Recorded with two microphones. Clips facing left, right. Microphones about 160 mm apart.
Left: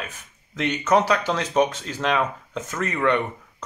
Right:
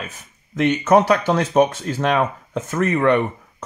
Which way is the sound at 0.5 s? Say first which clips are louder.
Right 5 dB; 50° right (ahead or behind).